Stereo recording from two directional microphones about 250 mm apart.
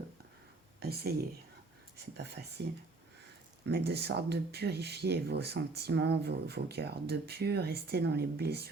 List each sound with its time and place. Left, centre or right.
0.8 s speech: right
3.7 s speech: right